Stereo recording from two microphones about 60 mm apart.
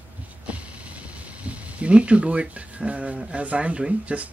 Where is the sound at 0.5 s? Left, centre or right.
Right.